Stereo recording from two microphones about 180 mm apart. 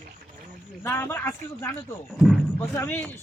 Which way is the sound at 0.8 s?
15° left (ahead or behind).